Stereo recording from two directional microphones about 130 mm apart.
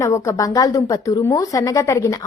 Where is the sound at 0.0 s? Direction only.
25° left (ahead or behind).